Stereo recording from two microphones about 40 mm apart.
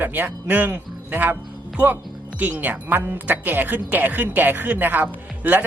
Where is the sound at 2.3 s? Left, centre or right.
Right.